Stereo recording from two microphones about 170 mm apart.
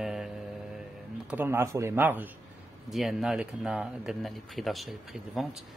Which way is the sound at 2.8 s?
Centre (ahead or behind).